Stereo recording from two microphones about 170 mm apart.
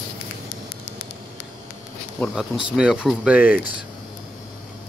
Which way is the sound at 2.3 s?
5° right (ahead or behind).